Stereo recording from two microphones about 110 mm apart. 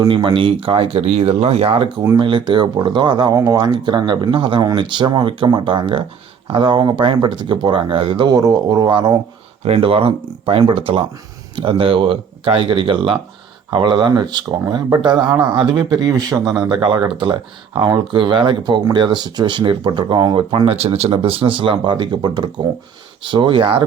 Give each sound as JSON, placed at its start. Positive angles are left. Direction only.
{"t": 0.1, "sound": "speech", "side_deg": -50}
{"t": 2.1, "sound": "speech", "side_deg": -45}
{"t": 3.3, "sound": "speech", "side_deg": -30}
{"t": 3.6, "sound": "speech", "side_deg": -45}
{"t": 9.6, "sound": "speech", "side_deg": -60}
{"t": 20.7, "sound": "speech", "side_deg": -70}